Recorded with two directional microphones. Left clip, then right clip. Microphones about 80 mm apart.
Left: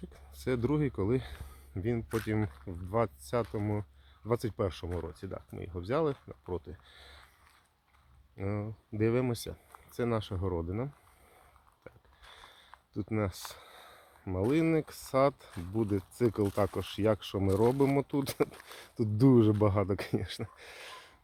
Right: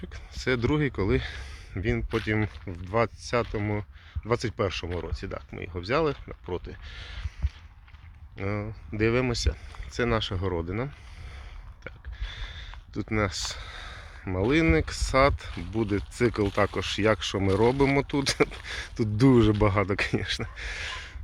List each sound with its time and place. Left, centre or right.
0.1 s speech: left
2.0 s speech: centre
2.8 s speech: left
3.6 s speech: centre
4.3 s speech: left
4.9 s speech: left
8.4 s speech: left
11.8 s speech: left
16.5 s speech: centre
16.7 s speech: left
18.9 s speech: left